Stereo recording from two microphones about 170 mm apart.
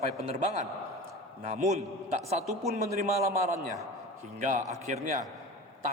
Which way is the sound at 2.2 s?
40° right (ahead or behind).